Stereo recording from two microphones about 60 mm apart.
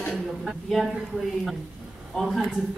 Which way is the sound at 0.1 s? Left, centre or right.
Centre.